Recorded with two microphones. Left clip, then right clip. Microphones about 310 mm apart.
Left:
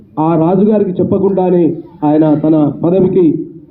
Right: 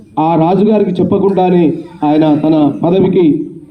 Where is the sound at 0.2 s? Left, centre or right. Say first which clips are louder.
Right 1 dB; right.